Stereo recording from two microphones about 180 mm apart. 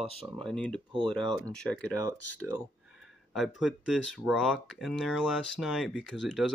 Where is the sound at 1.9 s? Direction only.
20° right (ahead or behind).